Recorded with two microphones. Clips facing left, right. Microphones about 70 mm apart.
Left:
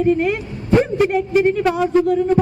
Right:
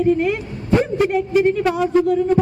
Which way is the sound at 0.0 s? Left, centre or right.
Left.